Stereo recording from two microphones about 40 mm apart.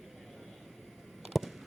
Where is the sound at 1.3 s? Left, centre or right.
Centre.